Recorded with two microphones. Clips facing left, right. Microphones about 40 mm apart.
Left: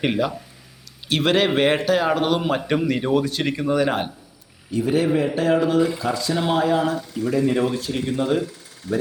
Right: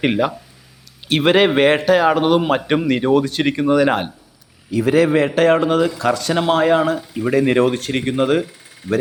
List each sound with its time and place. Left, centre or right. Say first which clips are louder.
1.0 s speech: right 5 dB; right
1.5 s a man's voice: right 5 dB; right
3.3 s a man's voice: right 5 dB; right
4.8 s a man's voice: right 5 dB; right
6.0 s speech: right 5 dB; right
6.5 s speech: right 5 dB; right
7.3 s speech: right 5 dB; right
8.9 s speech: right 5 dB; right